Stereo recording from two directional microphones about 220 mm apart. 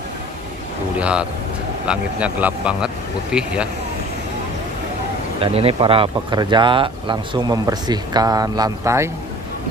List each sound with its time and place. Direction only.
0.9 s a man's voice: 5° right (ahead or behind)
5.4 s speech: 25° right (ahead or behind)